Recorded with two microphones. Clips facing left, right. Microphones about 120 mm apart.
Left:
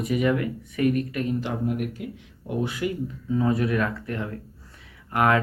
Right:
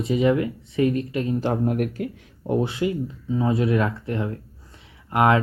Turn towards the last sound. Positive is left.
turn(degrees=-25)  # may be behind; listen again after turning